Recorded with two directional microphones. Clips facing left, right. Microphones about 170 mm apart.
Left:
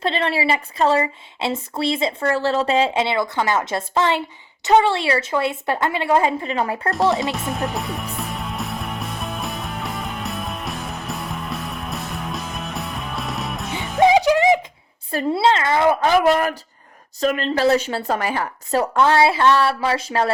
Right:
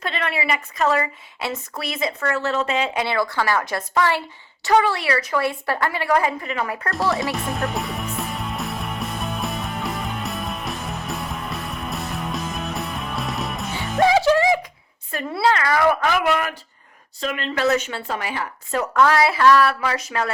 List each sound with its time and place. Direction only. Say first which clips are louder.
0.0 s speech: left 5 dB; 30° left (ahead or behind)
7.3 s music: even; centre (ahead or behind)
14.0 s music: left 2 dB; 15° left (ahead or behind)
15.1 s a woman's voice: left 3 dB; 30° left (ahead or behind)